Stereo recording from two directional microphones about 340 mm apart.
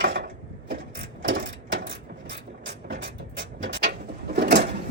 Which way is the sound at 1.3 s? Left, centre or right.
Right.